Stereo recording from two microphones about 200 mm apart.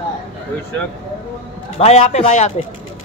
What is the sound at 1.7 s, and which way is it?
Speech, 35° left (ahead or behind).